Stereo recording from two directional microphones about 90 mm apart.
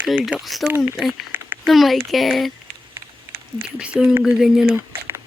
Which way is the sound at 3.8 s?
10° right (ahead or behind).